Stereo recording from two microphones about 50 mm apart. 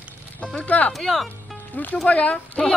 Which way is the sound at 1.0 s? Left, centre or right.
Centre.